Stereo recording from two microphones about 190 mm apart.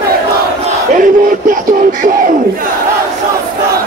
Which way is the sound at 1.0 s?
45° right (ahead or behind).